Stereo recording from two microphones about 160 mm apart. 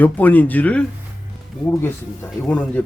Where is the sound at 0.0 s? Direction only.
10° left (ahead or behind).